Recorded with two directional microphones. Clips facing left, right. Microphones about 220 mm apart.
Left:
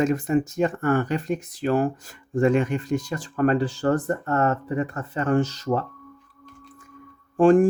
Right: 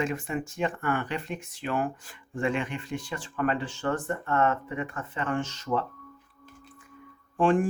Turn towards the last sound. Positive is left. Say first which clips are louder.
# left 8 dB
turn(degrees=40)  # may be behind; listen again after turning